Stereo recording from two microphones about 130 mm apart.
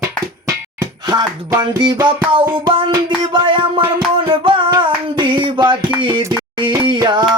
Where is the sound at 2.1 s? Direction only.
40° right (ahead or behind).